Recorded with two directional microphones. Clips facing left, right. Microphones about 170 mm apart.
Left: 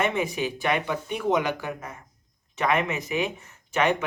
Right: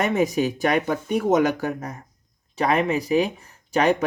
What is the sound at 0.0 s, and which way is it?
Speech, 40° right (ahead or behind).